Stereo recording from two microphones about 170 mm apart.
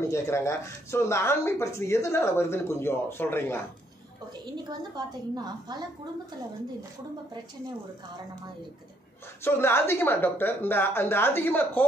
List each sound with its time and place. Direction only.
0.1 s speech: 15° left (ahead or behind)
4.6 s a woman's voice: 25° right (ahead or behind)
9.4 s speech: 15° left (ahead or behind)